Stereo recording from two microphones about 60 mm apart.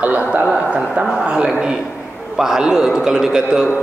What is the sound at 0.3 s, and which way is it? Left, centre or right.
Speech, centre.